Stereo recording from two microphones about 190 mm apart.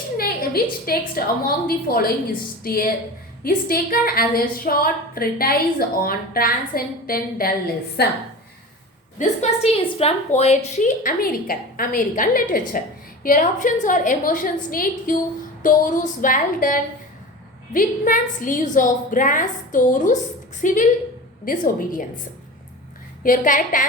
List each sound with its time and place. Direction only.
0.2 s a woman's voice: 50° left (ahead or behind)
9.1 s a woman's voice: 40° left (ahead or behind)
23.2 s a woman's voice: 45° left (ahead or behind)